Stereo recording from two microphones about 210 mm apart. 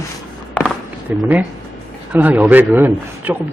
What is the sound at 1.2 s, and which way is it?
Speech, 5° right (ahead or behind).